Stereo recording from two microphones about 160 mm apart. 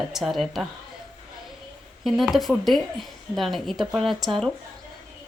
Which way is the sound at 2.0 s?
Centre (ahead or behind).